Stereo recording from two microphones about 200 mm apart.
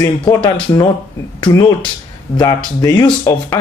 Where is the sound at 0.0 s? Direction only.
25° left (ahead or behind).